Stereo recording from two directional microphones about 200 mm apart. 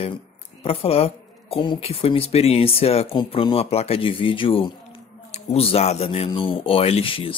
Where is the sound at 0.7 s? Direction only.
30° left (ahead or behind).